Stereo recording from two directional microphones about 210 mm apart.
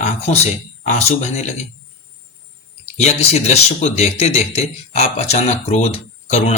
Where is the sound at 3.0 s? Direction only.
30° left (ahead or behind).